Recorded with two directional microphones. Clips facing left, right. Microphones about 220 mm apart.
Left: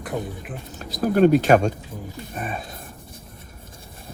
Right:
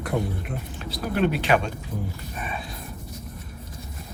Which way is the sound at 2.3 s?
45° left (ahead or behind).